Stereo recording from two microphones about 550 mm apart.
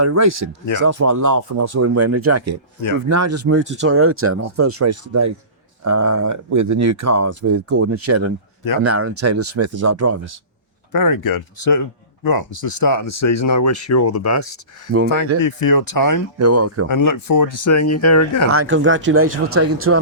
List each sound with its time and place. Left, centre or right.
0.0 s speech: right
10.9 s speech: left
16.4 s speech: right
16.9 s speech: left
18.5 s speech: right